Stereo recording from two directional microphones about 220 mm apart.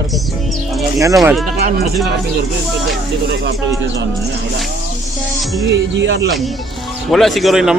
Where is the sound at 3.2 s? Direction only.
50° right (ahead or behind).